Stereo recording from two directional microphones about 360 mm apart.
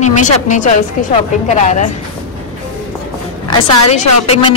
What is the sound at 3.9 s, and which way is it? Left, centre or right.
Speech, centre.